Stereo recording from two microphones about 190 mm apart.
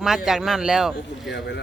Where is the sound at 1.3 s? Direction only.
65° left (ahead or behind).